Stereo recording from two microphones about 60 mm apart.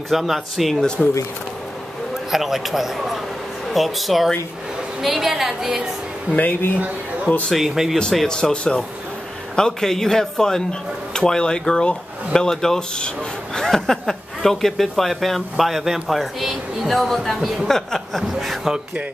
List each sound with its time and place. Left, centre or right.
0.1 s speech: centre
0.7 s a man's voice: centre
2.3 s speech: centre
6.3 s speech: left
7.5 s speech: centre
8.3 s a man's voice: centre